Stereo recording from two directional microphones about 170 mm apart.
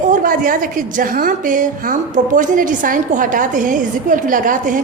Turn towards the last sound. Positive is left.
turn(degrees=-50)  # may be behind; listen again after turning